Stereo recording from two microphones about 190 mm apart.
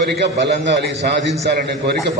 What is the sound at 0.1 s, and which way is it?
A man's voice, 60° right (ahead or behind).